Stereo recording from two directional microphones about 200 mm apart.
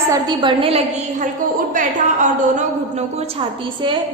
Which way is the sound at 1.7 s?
40° right (ahead or behind).